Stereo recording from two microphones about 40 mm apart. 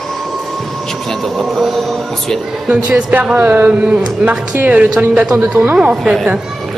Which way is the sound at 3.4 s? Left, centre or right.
Right.